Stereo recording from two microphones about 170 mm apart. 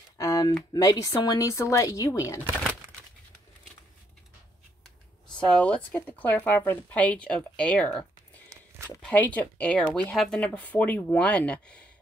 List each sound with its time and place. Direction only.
0.2 s speech: 20° left (ahead or behind)
5.5 s speech: 5° left (ahead or behind)
8.5 s a sound: 15° right (ahead or behind)
9.0 s speech: 10° left (ahead or behind)